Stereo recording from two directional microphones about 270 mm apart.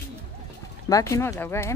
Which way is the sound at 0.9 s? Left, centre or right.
Centre.